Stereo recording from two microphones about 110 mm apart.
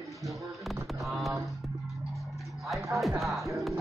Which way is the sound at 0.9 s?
Centre (ahead or behind).